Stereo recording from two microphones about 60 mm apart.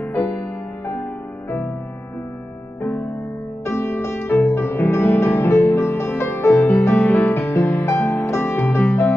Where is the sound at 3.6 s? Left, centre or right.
Left.